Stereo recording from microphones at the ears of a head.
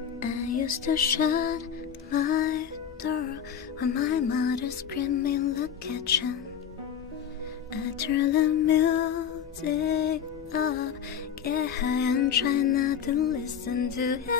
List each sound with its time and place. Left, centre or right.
0.2 s music: left
7.8 s music: left